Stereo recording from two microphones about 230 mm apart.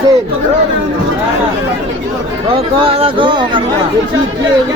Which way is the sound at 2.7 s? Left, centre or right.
Right.